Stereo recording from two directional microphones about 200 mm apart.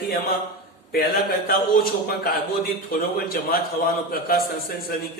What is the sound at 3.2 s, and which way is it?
A man's voice, 50° left (ahead or behind).